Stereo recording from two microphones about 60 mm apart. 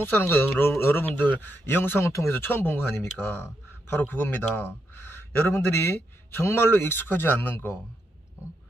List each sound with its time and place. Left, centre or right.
0.0 s a man's voice: left
2.0 s speech: left
2.3 s a man's voice: left
4.5 s speech: centre
4.9 s a man's voice: left